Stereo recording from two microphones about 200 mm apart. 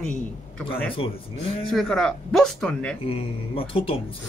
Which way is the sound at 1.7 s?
Centre (ahead or behind).